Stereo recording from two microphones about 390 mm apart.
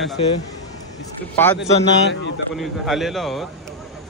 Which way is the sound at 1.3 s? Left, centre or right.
Centre.